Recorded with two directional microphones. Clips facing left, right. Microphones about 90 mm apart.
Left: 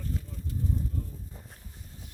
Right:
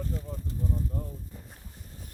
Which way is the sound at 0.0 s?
30° right (ahead or behind).